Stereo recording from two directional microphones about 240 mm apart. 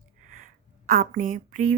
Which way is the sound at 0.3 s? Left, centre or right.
Right.